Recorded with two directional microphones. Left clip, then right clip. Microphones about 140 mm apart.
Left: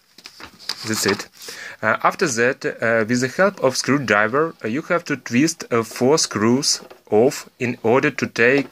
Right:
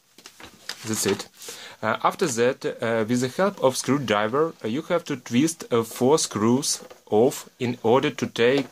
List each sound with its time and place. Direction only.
0.8 s speech: 5° left (ahead or behind)